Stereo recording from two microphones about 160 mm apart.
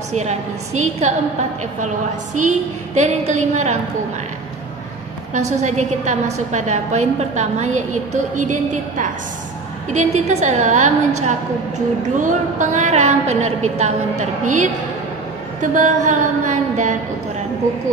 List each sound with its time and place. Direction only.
0.1 s a woman's voice: 45° right (ahead or behind)
2.3 s a woman's voice: 50° right (ahead or behind)
5.3 s a woman's voice: 45° right (ahead or behind)
15.7 s a woman's voice: 50° right (ahead or behind)